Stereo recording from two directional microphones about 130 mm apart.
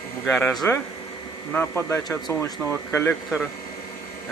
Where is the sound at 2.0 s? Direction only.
30° left (ahead or behind).